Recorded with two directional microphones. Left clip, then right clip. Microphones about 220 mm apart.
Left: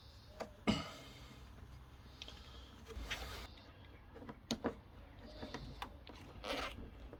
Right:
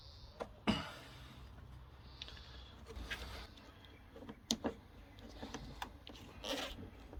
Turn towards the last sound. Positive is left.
turn(degrees=-10)  # may be behind; listen again after turning